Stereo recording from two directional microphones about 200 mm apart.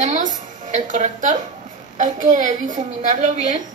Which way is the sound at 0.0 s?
40° right (ahead or behind).